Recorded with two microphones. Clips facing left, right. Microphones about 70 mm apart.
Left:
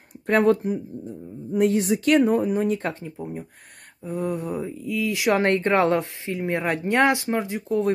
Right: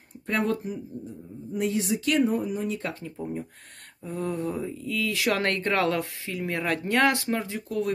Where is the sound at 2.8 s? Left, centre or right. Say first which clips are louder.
Left 4 dB; left.